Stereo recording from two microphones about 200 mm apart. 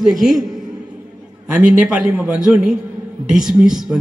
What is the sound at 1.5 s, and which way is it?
A man's voice, 5° right (ahead or behind).